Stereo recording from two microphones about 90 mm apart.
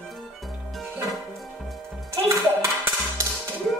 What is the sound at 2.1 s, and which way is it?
Music, 30° right (ahead or behind).